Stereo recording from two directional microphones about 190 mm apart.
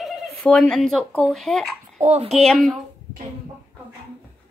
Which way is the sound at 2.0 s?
35° right (ahead or behind).